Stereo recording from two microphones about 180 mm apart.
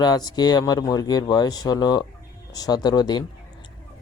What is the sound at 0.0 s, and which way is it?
Speech, 20° left (ahead or behind).